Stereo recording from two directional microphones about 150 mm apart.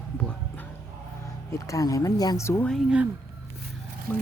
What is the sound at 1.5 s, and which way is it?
Speech, 20° left (ahead or behind).